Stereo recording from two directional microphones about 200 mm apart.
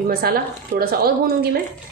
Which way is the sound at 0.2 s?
50° right (ahead or behind).